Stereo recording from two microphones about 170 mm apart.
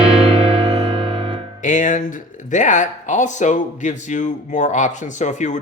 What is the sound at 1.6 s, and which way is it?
Speech, 50° left (ahead or behind).